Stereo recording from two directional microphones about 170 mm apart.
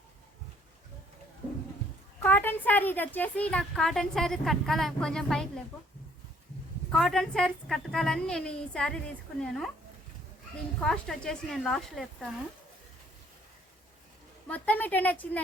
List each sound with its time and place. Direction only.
2.2 s a woman's voice: 10° left (ahead or behind)
6.9 s a woman's voice: centre (ahead or behind)
10.8 s a woman's voice: 5° left (ahead or behind)
14.4 s a woman's voice: 10° left (ahead or behind)